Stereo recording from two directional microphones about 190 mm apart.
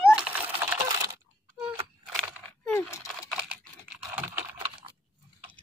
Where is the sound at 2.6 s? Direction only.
10° left (ahead or behind).